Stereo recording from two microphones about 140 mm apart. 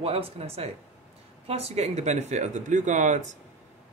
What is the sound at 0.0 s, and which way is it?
Speech, 45° right (ahead or behind).